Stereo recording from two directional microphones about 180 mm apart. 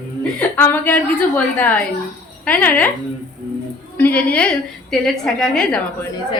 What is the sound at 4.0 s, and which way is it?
A woman's voice, 10° left (ahead or behind).